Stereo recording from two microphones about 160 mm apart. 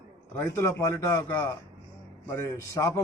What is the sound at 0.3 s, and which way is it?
A man's voice, 15° left (ahead or behind).